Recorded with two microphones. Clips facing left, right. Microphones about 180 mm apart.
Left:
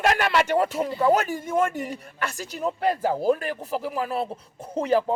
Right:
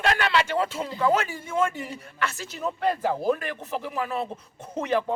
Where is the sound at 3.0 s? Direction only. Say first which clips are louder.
Left 2 dB; 10° left (ahead or behind).